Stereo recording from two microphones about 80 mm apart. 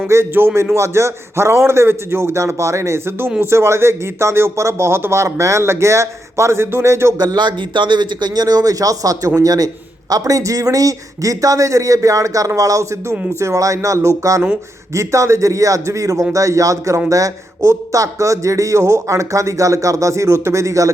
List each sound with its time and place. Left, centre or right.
0.1 s speech: right
7.2 s a man's voice: right